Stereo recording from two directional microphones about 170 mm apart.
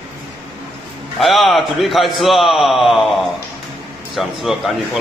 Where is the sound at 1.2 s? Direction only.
Centre (ahead or behind).